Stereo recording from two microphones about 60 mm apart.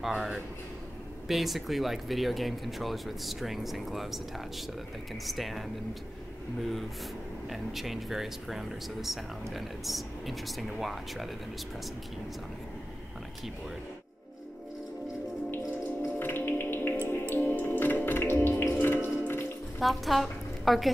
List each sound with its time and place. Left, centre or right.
0.0 s a man's voice: centre
6.6 s speech: centre
16.2 s music: left
19.8 s a woman's voice: centre